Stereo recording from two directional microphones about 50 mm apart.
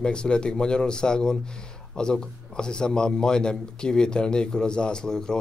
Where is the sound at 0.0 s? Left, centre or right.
Centre.